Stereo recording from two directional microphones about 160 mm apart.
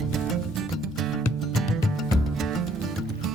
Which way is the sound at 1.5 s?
Centre (ahead or behind).